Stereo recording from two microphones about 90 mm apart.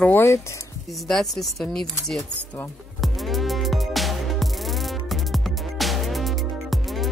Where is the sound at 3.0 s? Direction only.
Centre (ahead or behind).